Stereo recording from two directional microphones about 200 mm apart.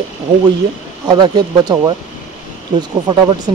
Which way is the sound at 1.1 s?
20° right (ahead or behind).